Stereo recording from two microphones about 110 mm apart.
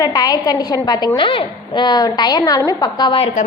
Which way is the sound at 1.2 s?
50° left (ahead or behind).